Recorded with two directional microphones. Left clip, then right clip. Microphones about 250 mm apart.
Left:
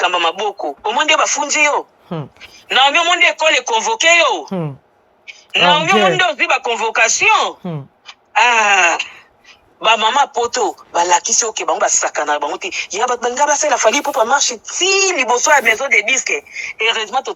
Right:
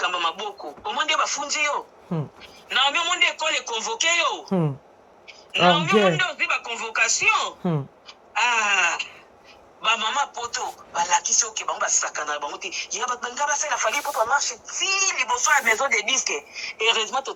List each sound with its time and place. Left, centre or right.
0.0 s speech: centre
5.5 s speech: centre
8.0 s wail: centre
9.8 s a man's voice: centre
15.7 s speech: centre